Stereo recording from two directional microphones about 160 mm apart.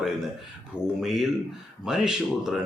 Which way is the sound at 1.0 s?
Centre (ahead or behind).